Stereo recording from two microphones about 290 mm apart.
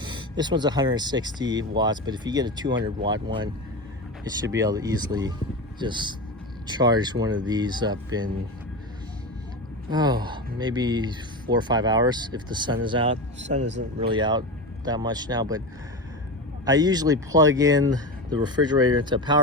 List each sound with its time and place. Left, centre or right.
0.0 s speech: centre
9.9 s speech: centre
13.7 s speech: right
14.1 s speech: centre
16.6 s speech: centre